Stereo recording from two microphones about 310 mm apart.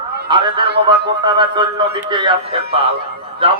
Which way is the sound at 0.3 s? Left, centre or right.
Centre.